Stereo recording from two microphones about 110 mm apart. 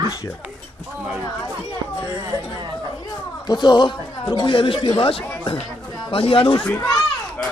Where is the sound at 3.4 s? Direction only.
40° left (ahead or behind); by 6.5 s 55° left (ahead or behind).